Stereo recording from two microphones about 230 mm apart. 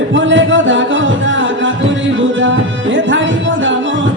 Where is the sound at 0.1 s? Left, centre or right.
Right.